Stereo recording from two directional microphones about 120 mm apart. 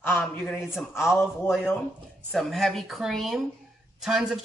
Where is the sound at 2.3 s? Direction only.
Centre (ahead or behind).